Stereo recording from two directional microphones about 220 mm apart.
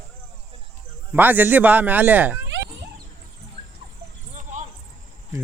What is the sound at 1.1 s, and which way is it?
Speech, 10° right (ahead or behind).